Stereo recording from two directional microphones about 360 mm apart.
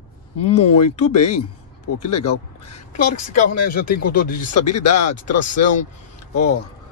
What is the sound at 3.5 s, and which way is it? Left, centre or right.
Speech, left.